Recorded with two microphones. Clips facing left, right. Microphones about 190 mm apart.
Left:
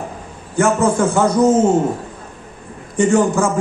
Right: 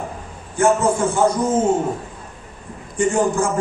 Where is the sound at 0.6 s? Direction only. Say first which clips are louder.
Left 2 dB; 80° left.